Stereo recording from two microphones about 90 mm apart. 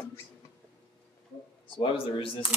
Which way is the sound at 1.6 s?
75° left (ahead or behind).